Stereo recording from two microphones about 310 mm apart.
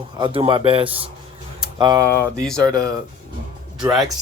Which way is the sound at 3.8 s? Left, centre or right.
Centre.